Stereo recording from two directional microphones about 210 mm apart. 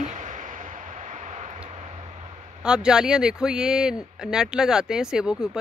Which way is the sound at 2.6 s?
5° right (ahead or behind).